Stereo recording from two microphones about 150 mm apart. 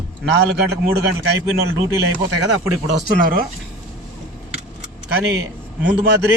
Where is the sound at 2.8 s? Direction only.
70° right (ahead or behind).